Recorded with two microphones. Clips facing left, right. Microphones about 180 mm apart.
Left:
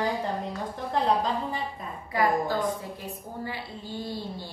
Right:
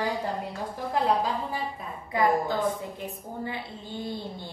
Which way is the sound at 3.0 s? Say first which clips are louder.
Right 1 dB; 20° right (ahead or behind).